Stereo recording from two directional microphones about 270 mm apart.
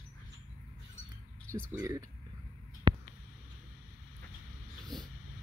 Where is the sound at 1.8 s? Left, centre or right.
Centre.